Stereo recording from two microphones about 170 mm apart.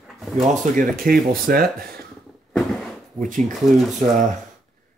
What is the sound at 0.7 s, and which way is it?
Speech, 55° right (ahead or behind).